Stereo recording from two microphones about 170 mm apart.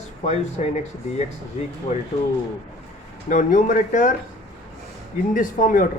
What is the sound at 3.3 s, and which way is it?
Speech, 50° left (ahead or behind).